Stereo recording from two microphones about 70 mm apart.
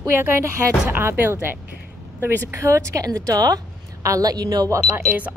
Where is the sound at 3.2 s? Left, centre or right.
Right.